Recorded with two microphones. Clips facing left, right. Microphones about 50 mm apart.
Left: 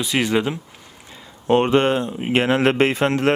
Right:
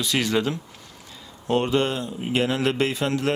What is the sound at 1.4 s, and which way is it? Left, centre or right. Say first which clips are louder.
Speech: left 6 dB; left.